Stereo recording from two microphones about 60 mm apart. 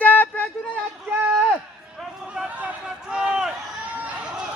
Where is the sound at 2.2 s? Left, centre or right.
Centre.